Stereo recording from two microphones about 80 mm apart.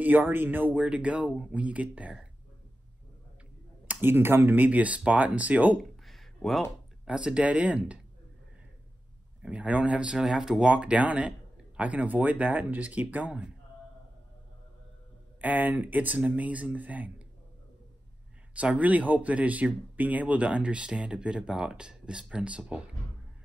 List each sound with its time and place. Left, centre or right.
0.0 s speech: right
3.8 s speech: right
5.8 s a sound: centre
7.1 s speech: centre
9.4 s speech: centre
15.4 s speech: right
18.5 s speech: centre